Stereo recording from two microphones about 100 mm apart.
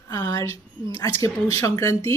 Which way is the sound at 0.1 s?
40° left (ahead or behind).